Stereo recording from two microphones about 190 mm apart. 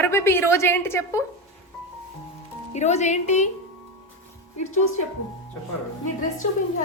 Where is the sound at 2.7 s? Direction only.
35° left (ahead or behind).